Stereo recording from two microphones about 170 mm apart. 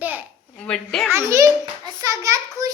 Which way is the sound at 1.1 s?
15° right (ahead or behind).